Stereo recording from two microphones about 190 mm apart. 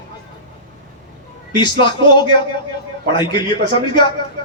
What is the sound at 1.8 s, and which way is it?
Speech, 25° left (ahead or behind).